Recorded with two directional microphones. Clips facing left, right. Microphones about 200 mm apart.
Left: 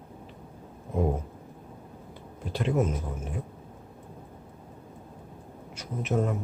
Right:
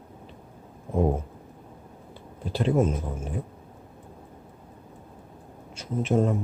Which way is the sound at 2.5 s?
30° right (ahead or behind).